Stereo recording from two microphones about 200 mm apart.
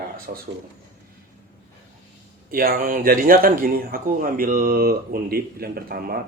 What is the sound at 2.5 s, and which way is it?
Speech, 45° right (ahead or behind).